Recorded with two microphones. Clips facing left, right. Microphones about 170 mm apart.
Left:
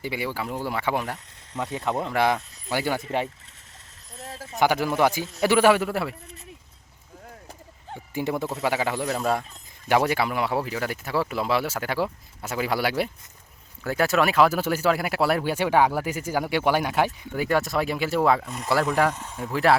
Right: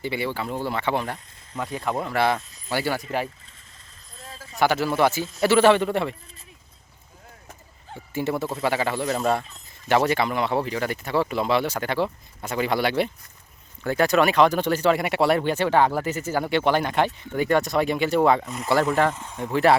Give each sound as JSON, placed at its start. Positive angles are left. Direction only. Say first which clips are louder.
{"t": 0.0, "sound": "speech", "louder": "right 2 dB", "side_deg": 10}
{"t": 1.5, "sound": "speech", "louder": "even", "side_deg": 25}
{"t": 4.2, "sound": "a sound", "louder": "left 4 dB", "side_deg": 75}
{"t": 4.5, "sound": "speech", "louder": "right 1 dB", "side_deg": 15}
{"t": 8.1, "sound": "speech", "louder": "right 1 dB", "side_deg": 15}